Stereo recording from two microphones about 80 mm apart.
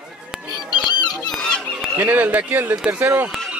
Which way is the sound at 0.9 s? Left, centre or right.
Left.